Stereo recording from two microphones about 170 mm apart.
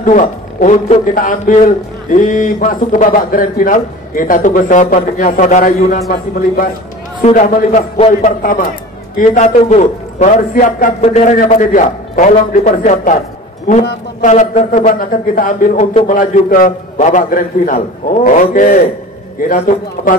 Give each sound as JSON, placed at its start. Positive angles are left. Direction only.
{"t": 0.0, "sound": "a man's voice", "side_deg": 50}
{"t": 6.0, "sound": "a man's voice", "side_deg": 60}
{"t": 7.2, "sound": "a man's voice", "side_deg": 50}
{"t": 14.2, "sound": "a man's voice", "side_deg": 45}
{"t": 14.9, "sound": "a man's voice", "side_deg": 55}
{"t": 16.1, "sound": "a man's voice", "side_deg": 55}